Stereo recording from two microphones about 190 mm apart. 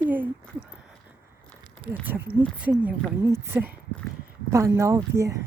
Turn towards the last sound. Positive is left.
turn(degrees=-15)  # may be behind; listen again after turning